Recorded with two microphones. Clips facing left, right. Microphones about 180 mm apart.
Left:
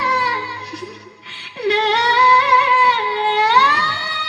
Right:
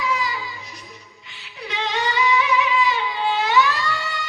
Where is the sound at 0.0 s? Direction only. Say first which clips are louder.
Left 3 dB; 70° left (ahead or behind).